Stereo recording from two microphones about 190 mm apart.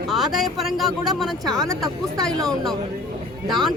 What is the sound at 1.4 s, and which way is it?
Speech, 20° right (ahead or behind).